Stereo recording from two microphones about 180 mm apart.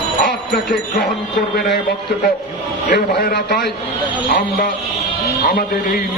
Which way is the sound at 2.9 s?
60° left (ahead or behind).